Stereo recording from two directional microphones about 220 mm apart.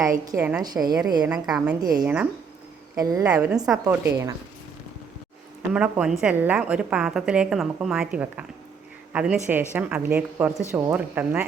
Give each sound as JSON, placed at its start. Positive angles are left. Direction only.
{"t": 0.0, "sound": "a woman's voice", "side_deg": -15}
{"t": 1.2, "sound": "a woman's voice", "side_deg": -5}
{"t": 1.8, "sound": "a woman's voice", "side_deg": -15}
{"t": 5.7, "sound": "a woman's voice", "side_deg": -5}